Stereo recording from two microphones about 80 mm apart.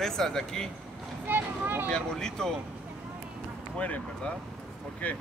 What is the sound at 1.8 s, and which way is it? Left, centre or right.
Speech, centre.